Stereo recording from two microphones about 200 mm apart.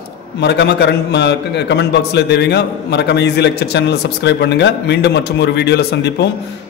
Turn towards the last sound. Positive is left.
turn(degrees=55)  # may be behind; listen again after turning